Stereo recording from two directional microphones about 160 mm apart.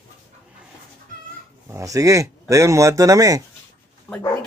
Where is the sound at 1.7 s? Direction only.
20° right (ahead or behind).